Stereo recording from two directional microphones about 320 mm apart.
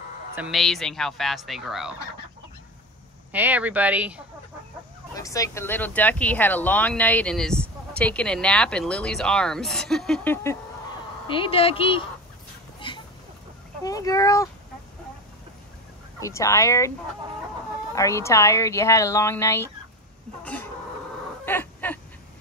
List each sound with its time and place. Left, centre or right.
0.4 s speech: centre
3.3 s speech: centre
5.1 s speech: centre
12.8 s a sound: centre
13.8 s speech: centre
16.2 s speech: centre
17.9 s speech: centre
20.4 s chicken: centre
21.5 s a sound: centre